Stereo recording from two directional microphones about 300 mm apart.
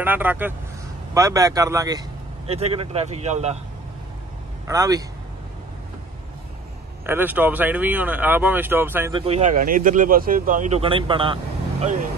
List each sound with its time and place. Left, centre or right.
0.0 s speech: centre; by 3.5 s right
4.6 s speech: centre
7.1 s speech: centre
9.2 s speech: right